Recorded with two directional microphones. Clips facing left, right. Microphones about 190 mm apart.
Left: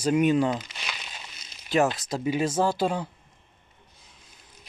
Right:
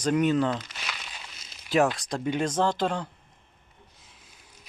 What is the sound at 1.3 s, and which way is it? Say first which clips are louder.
Speech: even; centre (ahead or behind).